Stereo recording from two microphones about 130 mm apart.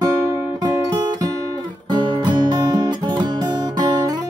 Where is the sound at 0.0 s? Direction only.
25° right (ahead or behind).